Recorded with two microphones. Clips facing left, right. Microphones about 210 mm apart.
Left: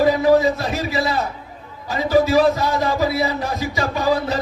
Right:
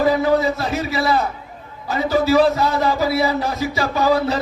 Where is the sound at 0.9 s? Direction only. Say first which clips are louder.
Right 3 dB; 30° left (ahead or behind).